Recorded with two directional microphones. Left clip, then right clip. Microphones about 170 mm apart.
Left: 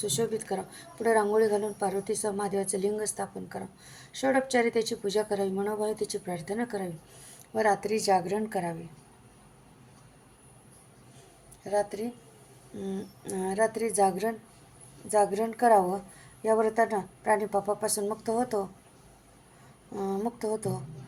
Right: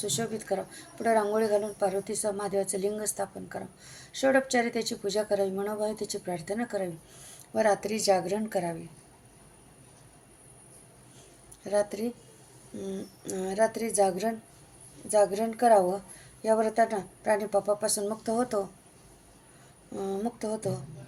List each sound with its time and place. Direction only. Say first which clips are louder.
0.0 s speech: left 3 dB; 10° right (ahead or behind)
11.6 s speech: right 1 dB; 20° right (ahead or behind)
20.0 s speech: left 1 dB; 10° right (ahead or behind)